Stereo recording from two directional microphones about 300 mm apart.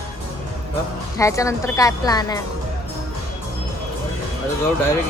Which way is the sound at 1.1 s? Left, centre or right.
Centre.